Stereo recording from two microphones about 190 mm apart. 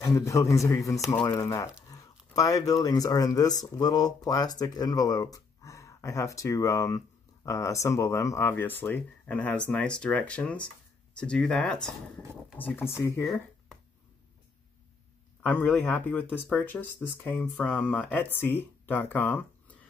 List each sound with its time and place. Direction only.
0.0 s speech: 15° left (ahead or behind)
13.2 s a sound: centre (ahead or behind)
15.4 s speech: 10° left (ahead or behind)